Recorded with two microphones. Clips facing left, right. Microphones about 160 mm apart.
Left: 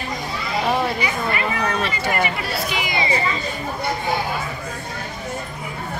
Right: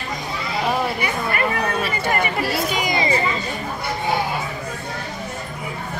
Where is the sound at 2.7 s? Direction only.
40° right (ahead or behind).